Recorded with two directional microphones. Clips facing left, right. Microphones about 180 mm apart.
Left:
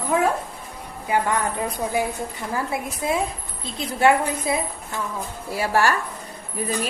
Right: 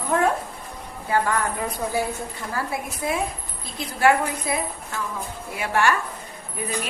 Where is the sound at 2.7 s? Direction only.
25° left (ahead or behind).